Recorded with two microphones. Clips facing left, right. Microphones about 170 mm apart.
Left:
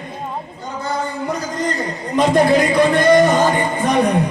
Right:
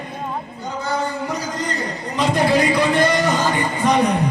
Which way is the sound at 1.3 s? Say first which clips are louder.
Left 3 dB; 50° left (ahead or behind).